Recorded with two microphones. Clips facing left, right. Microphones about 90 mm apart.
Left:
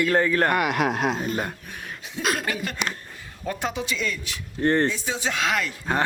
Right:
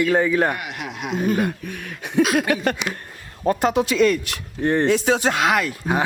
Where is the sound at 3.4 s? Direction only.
55° right (ahead or behind).